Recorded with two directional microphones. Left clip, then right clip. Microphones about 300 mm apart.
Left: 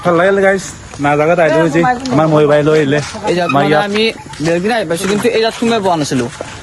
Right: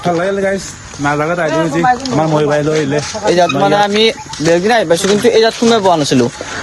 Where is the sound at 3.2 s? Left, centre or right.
Centre.